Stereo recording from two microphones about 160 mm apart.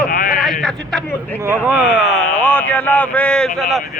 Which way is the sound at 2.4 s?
10° left (ahead or behind).